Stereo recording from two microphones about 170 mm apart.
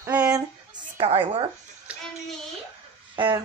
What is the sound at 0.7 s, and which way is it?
Speech, 30° right (ahead or behind).